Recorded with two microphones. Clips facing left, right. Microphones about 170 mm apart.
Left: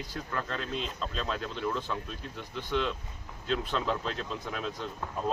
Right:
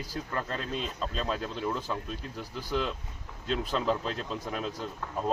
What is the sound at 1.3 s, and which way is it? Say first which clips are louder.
Speech: even; 10° right (ahead or behind).